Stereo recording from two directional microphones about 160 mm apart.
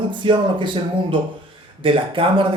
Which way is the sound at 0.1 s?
30° right (ahead or behind).